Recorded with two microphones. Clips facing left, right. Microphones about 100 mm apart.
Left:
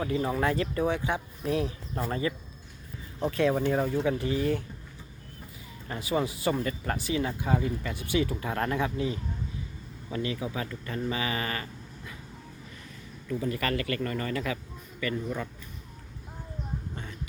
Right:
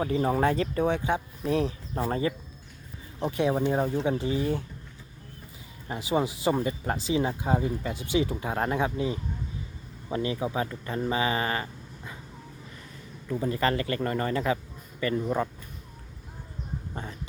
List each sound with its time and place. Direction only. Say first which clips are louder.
0.0 s speech: right 3 dB; 35° right (ahead or behind)
3.2 s speech: even; 20° right (ahead or behind)
5.9 s speech: right 2 dB; 20° right (ahead or behind)
13.4 s speech: right 4 dB; 25° right (ahead or behind)
16.9 s a sound: right 3 dB; 35° right (ahead or behind)